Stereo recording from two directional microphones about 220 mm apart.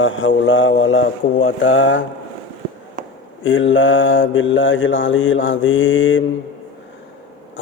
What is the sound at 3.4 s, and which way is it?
A man's voice, 60° left (ahead or behind).